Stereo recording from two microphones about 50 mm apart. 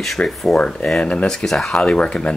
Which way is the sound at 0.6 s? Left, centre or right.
Centre.